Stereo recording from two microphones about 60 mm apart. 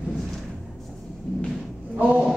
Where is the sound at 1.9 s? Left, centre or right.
Right.